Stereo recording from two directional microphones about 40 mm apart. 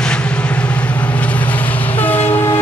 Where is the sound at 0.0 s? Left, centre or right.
Left.